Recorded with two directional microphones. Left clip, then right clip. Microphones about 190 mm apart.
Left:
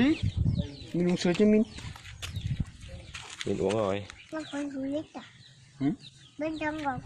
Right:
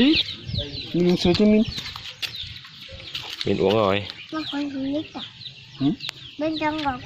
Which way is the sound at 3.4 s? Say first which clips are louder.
Right 9 dB; centre (ahead or behind).